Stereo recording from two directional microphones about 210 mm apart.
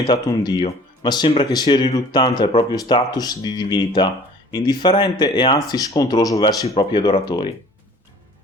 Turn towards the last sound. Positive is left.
turn(degrees=20)  # may be behind; listen again after turning